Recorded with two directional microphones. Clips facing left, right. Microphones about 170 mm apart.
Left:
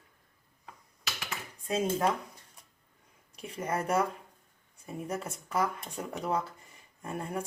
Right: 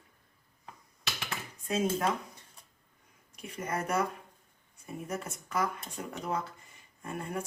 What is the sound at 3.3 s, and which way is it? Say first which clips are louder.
Speech: left 2 dB; 30° left (ahead or behind).